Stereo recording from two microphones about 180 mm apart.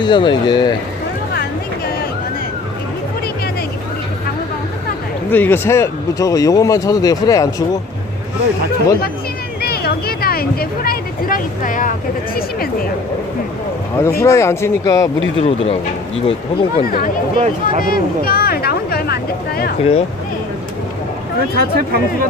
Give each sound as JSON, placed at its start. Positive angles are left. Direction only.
{"t": 0.0, "sound": "speech", "side_deg": 25}
{"t": 5.3, "sound": "speech", "side_deg": 10}
{"t": 9.6, "sound": "a sound", "side_deg": 60}
{"t": 14.0, "sound": "speech", "side_deg": 15}
{"t": 15.4, "sound": "speech", "side_deg": 30}
{"t": 16.8, "sound": "speech", "side_deg": 55}
{"t": 17.3, "sound": "speech", "side_deg": -35}
{"t": 17.7, "sound": "a sound", "side_deg": 50}
{"t": 19.8, "sound": "speech", "side_deg": 35}
{"t": 21.5, "sound": "speech", "side_deg": -60}